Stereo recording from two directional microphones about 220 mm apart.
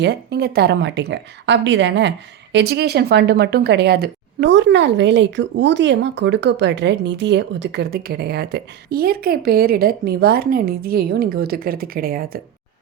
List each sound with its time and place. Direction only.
0.0 s a woman's voice: 50° right (ahead or behind)